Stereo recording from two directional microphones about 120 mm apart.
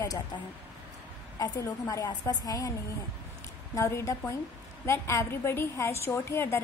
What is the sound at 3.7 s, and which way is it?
A woman's voice, 25° left (ahead or behind).